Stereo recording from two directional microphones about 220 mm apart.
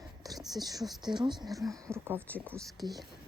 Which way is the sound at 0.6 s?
15° right (ahead or behind).